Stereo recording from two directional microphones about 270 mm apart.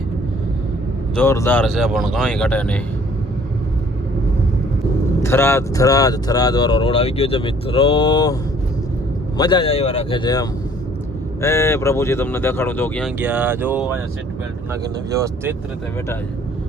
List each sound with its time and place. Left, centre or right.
1.1 s speech: centre
5.2 s speech: centre
9.4 s speech: centre